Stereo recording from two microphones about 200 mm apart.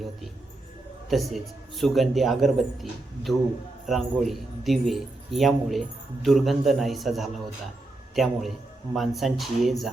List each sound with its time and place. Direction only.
1.1 s speech: centre (ahead or behind)
3.8 s speech: centre (ahead or behind)